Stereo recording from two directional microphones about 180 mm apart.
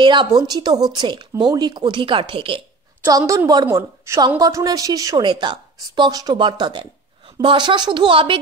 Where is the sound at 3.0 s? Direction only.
15° right (ahead or behind).